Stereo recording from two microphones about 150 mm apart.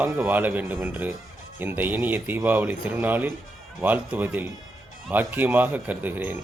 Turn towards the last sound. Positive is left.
turn(degrees=-10)  # may be behind; listen again after turning